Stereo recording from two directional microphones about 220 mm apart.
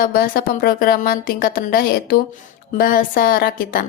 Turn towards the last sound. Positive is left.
turn(degrees=40)  # may be behind; listen again after turning